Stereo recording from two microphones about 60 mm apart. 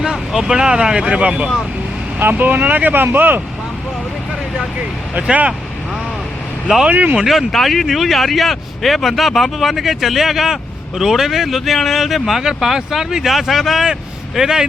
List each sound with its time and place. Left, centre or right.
0.0 s speech: centre
2.1 s speech: right
5.2 s speech: centre
6.8 s speech: right
7.2 s speech: centre